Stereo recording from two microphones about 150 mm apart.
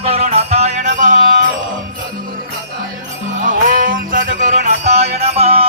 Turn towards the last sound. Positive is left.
turn(degrees=-40)  # may be behind; listen again after turning